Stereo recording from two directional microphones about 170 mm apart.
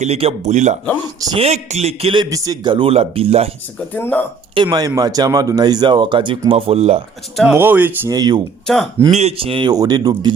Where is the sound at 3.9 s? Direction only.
10° left (ahead or behind).